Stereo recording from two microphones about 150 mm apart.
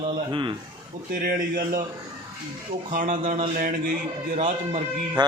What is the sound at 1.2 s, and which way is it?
Speech, 65° right (ahead or behind).